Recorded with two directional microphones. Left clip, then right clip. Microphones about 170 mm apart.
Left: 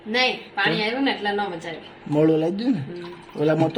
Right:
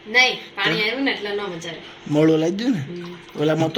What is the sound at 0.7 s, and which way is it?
Speech, 5° left (ahead or behind).